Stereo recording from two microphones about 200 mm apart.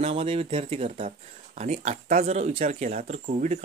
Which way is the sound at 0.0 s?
30° right (ahead or behind).